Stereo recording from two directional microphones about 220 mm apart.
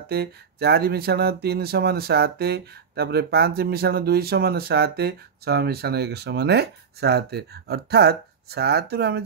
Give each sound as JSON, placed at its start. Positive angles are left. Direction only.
{"t": 0.1, "sound": "speech", "side_deg": -45}